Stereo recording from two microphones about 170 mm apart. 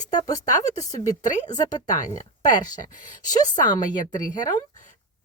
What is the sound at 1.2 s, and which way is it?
Speech, 45° left (ahead or behind).